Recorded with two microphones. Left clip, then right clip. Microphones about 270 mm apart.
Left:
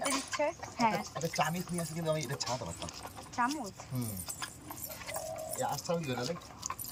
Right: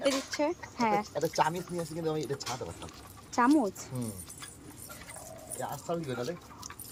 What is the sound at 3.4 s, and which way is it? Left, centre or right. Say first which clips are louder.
Speech: right 6 dB; right.